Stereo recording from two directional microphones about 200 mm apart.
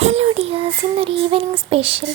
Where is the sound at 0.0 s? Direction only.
35° right (ahead or behind).